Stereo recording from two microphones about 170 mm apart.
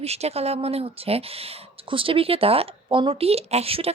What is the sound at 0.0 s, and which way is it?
Speech, 40° right (ahead or behind).